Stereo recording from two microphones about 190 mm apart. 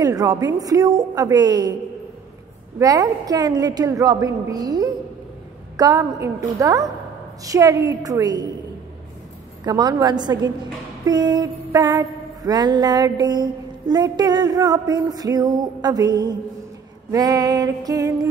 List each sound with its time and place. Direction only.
0.0 s mantra: 20° right (ahead or behind)
2.8 s mantra: 20° right (ahead or behind)
5.8 s a woman's voice: 20° right (ahead or behind)
9.7 s mantra: 20° right (ahead or behind)